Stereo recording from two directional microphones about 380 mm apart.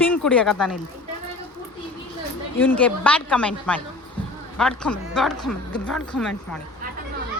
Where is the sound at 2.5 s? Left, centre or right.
Centre.